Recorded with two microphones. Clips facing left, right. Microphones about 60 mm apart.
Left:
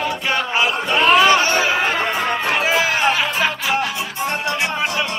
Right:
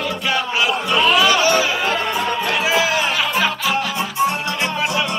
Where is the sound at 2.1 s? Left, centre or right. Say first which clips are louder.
Even; left.